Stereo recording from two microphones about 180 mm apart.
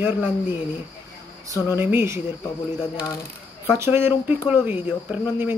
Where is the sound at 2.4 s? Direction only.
20° left (ahead or behind).